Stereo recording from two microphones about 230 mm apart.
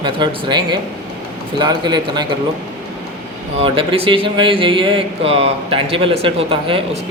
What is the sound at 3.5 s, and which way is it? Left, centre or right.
Speech, right.